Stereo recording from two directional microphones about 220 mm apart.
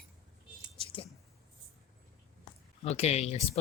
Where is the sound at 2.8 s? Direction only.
30° left (ahead or behind).